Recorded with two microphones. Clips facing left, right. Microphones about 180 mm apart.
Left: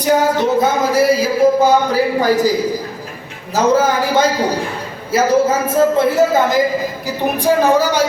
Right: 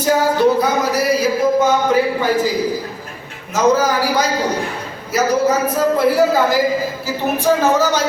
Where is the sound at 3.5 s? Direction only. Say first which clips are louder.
Left 1 dB; 25° left (ahead or behind).